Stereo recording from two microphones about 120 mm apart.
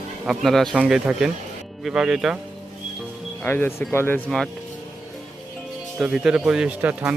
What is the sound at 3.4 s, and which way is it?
Speech, 15° left (ahead or behind).